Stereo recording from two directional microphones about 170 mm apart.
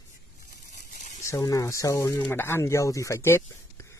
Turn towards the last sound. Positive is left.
turn(degrees=15)  # may be behind; listen again after turning